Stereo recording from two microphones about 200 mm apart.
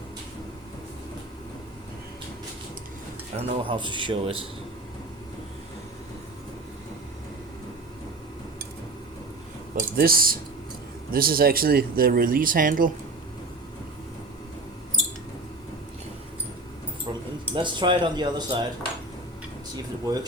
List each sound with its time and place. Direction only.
3.3 s speech: 30° right (ahead or behind)
9.7 s speech: 45° right (ahead or behind)
17.1 s keys jangling: 25° right (ahead or behind)
17.5 s speech: 25° right (ahead or behind)
19.7 s speech: 20° right (ahead or behind)